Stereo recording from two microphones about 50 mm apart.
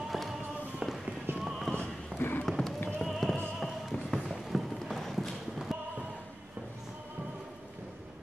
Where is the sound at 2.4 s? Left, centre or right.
Centre.